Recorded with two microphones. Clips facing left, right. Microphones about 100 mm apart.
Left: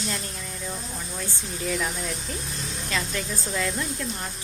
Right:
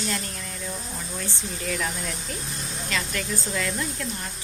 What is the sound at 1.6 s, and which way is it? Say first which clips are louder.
Speech: left 2 dB; 10° left (ahead or behind).